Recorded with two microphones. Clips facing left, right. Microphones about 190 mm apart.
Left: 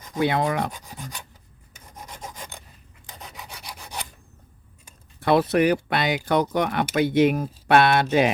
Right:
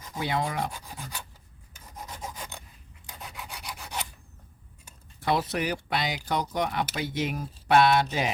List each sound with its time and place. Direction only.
0.1 s speech: 65° left (ahead or behind)
3.2 s filing: centre (ahead or behind)
5.2 s speech: 60° left (ahead or behind)